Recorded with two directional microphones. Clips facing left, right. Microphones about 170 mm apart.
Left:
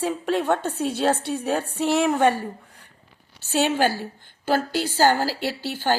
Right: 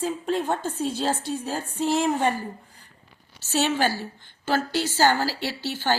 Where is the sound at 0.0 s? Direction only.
70° left (ahead or behind).